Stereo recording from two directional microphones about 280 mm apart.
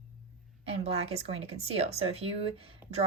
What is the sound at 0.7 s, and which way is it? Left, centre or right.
Speech, right.